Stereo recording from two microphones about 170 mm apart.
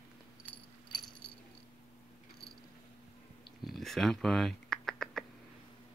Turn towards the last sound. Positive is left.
turn(degrees=5)  # may be behind; listen again after turning